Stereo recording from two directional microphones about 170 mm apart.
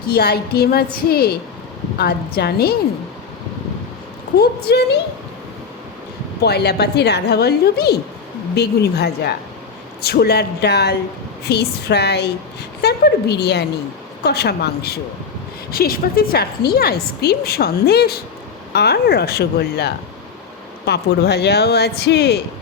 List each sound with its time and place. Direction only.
0.1 s a woman's voice: 65° left (ahead or behind)
4.4 s a woman's voice: 70° left (ahead or behind)
6.4 s a woman's voice: 75° left (ahead or behind)